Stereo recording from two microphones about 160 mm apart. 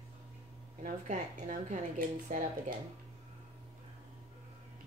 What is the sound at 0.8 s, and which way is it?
A woman's voice, 55° right (ahead or behind).